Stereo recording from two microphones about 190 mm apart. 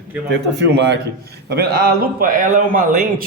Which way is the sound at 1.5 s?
55° right (ahead or behind).